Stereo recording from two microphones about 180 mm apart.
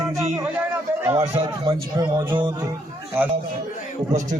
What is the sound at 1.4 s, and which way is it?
Speech, 25° right (ahead or behind).